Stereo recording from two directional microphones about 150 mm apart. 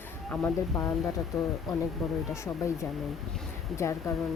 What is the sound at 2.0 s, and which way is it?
Speech, centre (ahead or behind).